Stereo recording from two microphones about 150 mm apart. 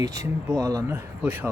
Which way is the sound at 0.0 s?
20° right (ahead or behind).